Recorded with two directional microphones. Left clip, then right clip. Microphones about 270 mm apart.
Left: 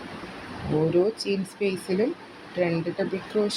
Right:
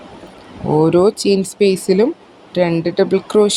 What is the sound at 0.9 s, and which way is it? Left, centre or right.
A woman's voice, right.